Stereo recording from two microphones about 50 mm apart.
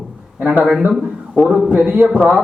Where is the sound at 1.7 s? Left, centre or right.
Right.